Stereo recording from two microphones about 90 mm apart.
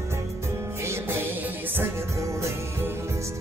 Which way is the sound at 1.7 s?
30° right (ahead or behind).